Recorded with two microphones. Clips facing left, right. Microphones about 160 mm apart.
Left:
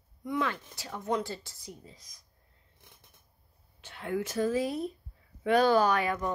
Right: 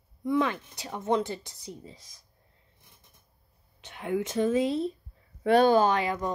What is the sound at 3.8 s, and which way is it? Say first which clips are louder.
A woman's voice: right 3 dB; 20° right (ahead or behind).